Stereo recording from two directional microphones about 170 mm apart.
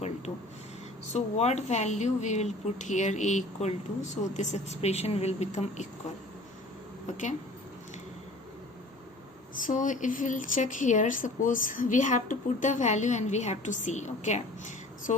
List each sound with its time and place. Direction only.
1.1 s speech: 40° left (ahead or behind)
9.6 s speech: 50° left (ahead or behind)